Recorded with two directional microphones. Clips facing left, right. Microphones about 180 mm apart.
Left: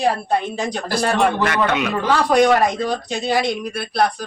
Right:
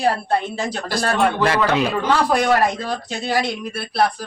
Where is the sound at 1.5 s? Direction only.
30° right (ahead or behind).